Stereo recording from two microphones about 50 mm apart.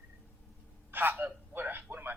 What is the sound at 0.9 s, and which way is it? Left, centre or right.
A man's voice, right.